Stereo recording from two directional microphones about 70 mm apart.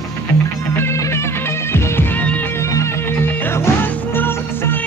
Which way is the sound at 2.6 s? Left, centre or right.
Left.